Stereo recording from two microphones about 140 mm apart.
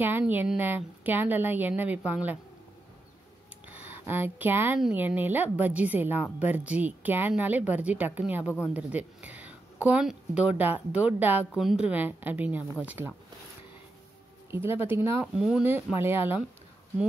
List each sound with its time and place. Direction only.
0.0 s speech: 15° right (ahead or behind)
3.6 s speech: 15° right (ahead or behind)
14.5 s speech: 15° right (ahead or behind)